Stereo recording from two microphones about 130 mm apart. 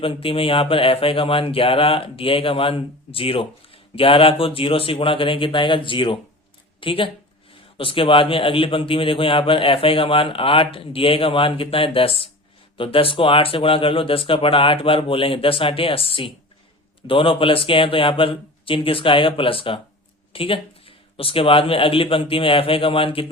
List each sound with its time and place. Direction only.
0.0 s speech: 45° left (ahead or behind)